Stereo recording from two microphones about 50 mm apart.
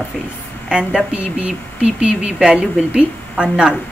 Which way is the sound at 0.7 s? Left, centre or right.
Centre.